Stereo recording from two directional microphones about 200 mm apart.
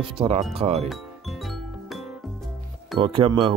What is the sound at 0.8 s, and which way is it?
Music, centre (ahead or behind).